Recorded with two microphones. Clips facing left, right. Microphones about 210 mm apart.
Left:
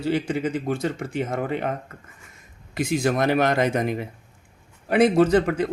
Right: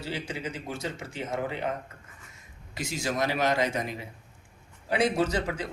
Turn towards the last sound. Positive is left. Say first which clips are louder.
# left 10 dB
turn(degrees=55)  # may be behind; listen again after turning